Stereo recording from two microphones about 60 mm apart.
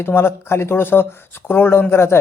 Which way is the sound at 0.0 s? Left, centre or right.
Left.